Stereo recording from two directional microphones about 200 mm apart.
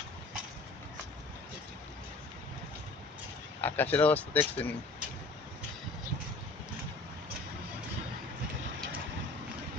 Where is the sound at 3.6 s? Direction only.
10° left (ahead or behind).